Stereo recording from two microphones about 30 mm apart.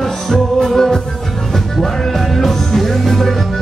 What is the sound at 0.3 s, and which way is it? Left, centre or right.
Music, centre.